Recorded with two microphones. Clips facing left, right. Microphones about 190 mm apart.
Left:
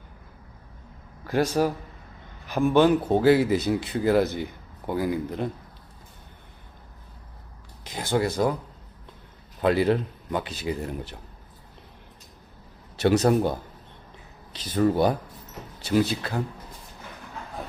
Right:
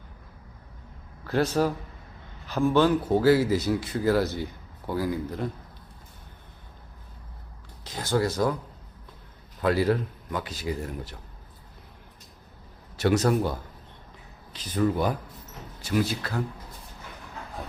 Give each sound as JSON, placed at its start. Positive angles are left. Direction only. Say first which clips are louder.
{"t": 1.3, "sound": "speech", "louder": "left 1 dB", "side_deg": 15}
{"t": 7.9, "sound": "speech", "louder": "left 1 dB", "side_deg": 15}
{"t": 9.6, "sound": "speech", "louder": "left 2 dB", "side_deg": 20}
{"t": 13.0, "sound": "speech", "louder": "left 3 dB", "side_deg": 25}
{"t": 14.8, "sound": "speech", "louder": "left 4 dB", "side_deg": 35}